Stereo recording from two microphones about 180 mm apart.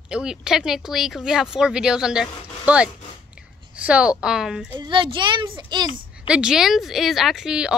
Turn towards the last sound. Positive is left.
turn(degrees=-5)  # may be behind; listen again after turning